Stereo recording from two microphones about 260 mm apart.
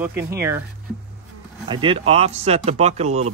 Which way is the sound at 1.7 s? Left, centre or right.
Centre.